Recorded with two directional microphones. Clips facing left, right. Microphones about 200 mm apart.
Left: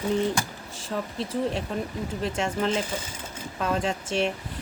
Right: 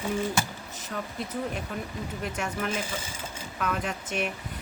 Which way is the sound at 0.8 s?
30° left (ahead or behind).